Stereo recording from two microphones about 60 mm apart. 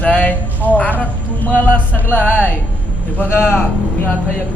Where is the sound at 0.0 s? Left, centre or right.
Left.